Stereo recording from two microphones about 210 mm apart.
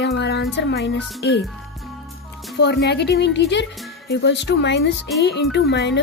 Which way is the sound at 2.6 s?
50° left (ahead or behind).